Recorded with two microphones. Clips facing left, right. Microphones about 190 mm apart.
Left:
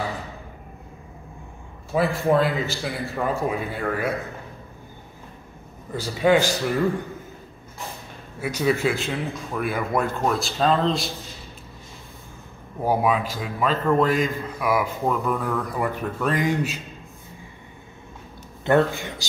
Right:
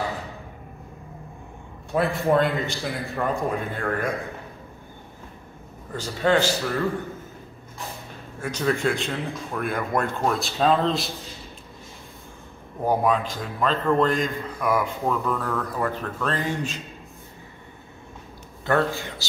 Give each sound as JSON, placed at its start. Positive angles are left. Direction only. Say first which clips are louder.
{"t": 1.9, "sound": "a man's voice", "louder": "left 1 dB", "side_deg": 0}
{"t": 5.9, "sound": "a man's voice", "louder": "left 2 dB", "side_deg": 10}
{"t": 8.4, "sound": "a man's voice", "louder": "left 2 dB", "side_deg": 10}
{"t": 12.8, "sound": "a man's voice", "louder": "even", "side_deg": 5}
{"t": 18.7, "sound": "a man's voice", "louder": "left 3 dB", "side_deg": 20}